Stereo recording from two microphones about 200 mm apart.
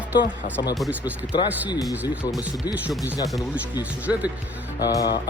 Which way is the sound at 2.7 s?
10° right (ahead or behind).